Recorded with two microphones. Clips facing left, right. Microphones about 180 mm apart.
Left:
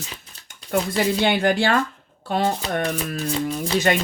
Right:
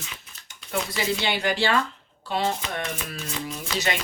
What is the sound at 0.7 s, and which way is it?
Speech, 55° left (ahead or behind).